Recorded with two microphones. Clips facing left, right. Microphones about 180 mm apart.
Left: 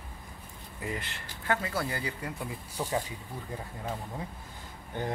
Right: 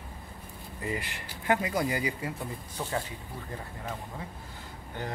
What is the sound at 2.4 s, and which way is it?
Speech, 10° left (ahead or behind).